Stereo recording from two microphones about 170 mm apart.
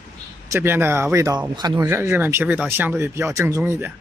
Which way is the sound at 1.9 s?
15° right (ahead or behind).